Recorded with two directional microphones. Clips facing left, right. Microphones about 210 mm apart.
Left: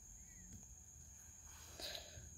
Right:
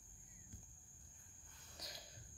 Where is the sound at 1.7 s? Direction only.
30° left (ahead or behind).